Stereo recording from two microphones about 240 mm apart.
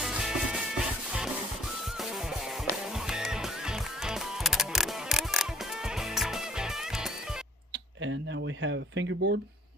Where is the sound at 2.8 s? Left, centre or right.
Centre.